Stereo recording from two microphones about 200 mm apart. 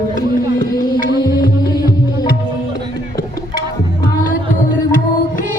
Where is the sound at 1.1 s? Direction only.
20° left (ahead or behind).